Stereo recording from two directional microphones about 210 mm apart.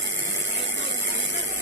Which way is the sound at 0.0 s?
65° right (ahead or behind).